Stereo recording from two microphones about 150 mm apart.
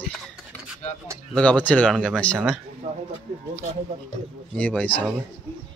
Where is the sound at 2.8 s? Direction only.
45° right (ahead or behind).